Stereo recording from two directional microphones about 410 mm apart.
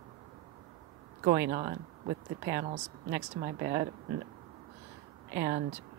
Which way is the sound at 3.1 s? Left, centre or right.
Right.